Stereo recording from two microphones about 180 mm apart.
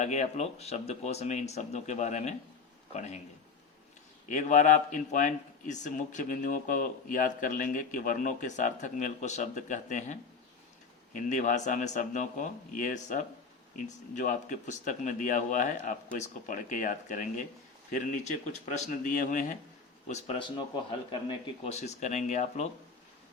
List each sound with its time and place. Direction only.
0.0 s speech: 40° left (ahead or behind)
4.3 s speech: 45° left (ahead or behind)
18.6 s speech: 40° left (ahead or behind)